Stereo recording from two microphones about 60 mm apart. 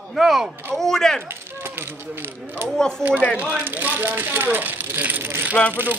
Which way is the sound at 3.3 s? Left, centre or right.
Right.